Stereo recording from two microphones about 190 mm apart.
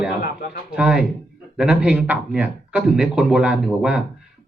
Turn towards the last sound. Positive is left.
turn(degrees=-5)  # may be behind; listen again after turning